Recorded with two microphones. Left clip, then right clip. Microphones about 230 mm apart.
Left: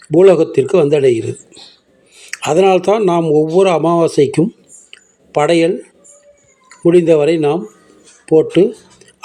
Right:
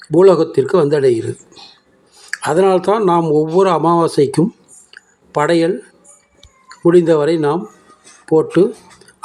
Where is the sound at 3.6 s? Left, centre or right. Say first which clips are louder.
Left 1 dB; right.